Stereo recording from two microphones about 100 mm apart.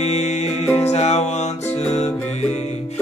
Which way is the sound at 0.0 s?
90° left.